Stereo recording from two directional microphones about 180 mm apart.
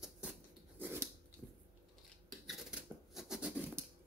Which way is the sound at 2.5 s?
Centre (ahead or behind).